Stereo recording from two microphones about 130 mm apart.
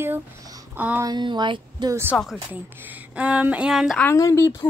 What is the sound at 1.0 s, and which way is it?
Speech, 35° right (ahead or behind).